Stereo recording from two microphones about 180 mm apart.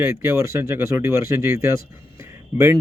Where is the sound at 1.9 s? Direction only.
15° right (ahead or behind).